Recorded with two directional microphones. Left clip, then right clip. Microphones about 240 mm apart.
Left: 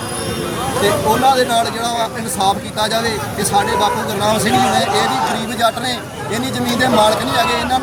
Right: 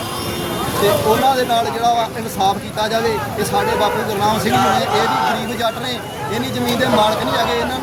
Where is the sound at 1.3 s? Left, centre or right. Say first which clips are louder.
Left 2 dB; centre.